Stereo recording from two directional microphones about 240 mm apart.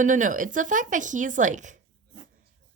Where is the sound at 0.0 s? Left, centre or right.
Right.